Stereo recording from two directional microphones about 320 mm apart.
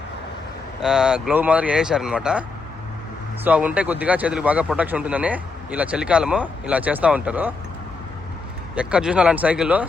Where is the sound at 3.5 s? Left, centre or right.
Centre.